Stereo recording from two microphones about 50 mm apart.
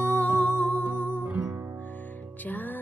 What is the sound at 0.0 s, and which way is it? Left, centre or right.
Music, left.